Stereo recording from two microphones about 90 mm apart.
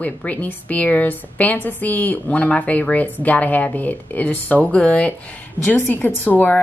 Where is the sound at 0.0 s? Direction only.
15° left (ahead or behind).